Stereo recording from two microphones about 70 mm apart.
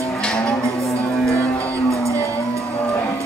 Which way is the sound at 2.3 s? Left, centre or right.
Left.